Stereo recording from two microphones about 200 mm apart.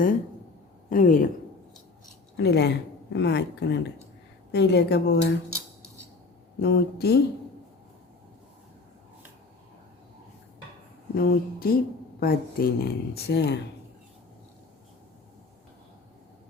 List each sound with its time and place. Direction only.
0.9 s speech: 40° left (ahead or behind)
2.4 s speech: 55° left (ahead or behind)
6.6 s speech: 55° left (ahead or behind)
11.1 s speech: 50° left (ahead or behind)